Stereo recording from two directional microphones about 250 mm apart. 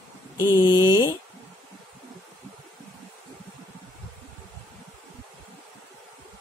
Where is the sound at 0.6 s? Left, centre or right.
Centre.